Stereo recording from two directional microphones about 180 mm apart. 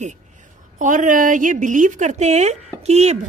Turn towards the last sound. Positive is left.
turn(degrees=-40)  # may be behind; listen again after turning